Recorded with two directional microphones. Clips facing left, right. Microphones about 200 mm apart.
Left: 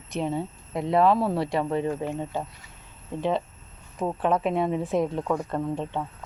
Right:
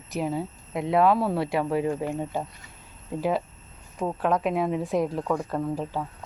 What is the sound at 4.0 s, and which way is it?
A woman's voice, centre (ahead or behind).